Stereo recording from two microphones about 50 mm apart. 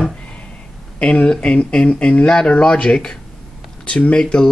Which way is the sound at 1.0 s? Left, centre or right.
Left.